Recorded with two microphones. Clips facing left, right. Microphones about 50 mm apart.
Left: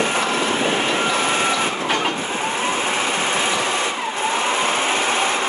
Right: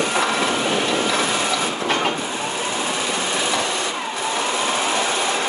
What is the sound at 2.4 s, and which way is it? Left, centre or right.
Vehicle, left.